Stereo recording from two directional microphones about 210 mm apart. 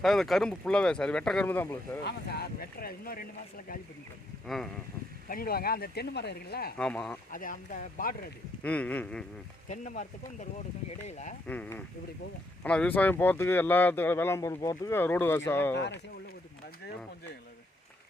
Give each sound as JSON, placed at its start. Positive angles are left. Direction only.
{"t": 0.0, "sound": "speech", "side_deg": 0}
{"t": 2.0, "sound": "speech", "side_deg": 50}
{"t": 4.4, "sound": "speech", "side_deg": 0}
{"t": 5.3, "sound": "speech", "side_deg": 45}
{"t": 6.7, "sound": "speech", "side_deg": 5}
{"t": 7.3, "sound": "speech", "side_deg": 40}
{"t": 8.6, "sound": "speech", "side_deg": 5}
{"t": 9.6, "sound": "speech", "side_deg": 35}
{"t": 11.4, "sound": "speech", "side_deg": 5}